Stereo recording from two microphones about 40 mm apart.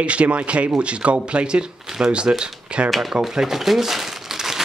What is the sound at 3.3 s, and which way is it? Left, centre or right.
Crumpling, centre.